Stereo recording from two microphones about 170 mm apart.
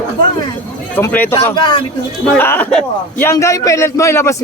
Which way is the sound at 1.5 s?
25° left (ahead or behind).